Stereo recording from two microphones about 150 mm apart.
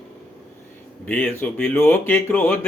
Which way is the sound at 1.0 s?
10° left (ahead or behind).